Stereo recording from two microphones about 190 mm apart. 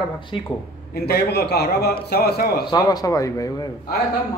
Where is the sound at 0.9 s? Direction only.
60° left (ahead or behind).